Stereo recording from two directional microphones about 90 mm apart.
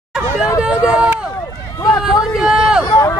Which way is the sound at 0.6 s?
10° right (ahead or behind).